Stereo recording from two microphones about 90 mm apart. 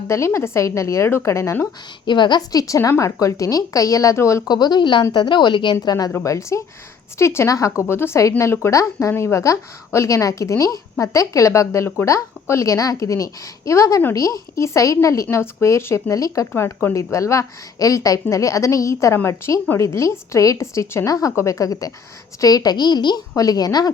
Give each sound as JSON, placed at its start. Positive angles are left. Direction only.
{"t": 0.3, "sound": "speech", "side_deg": 30}
{"t": 2.0, "sound": "a woman's voice", "side_deg": 60}
{"t": 4.4, "sound": "a woman's voice", "side_deg": 50}
{"t": 5.8, "sound": "a woman's voice", "side_deg": 50}
{"t": 6.2, "sound": "a woman's voice", "side_deg": 35}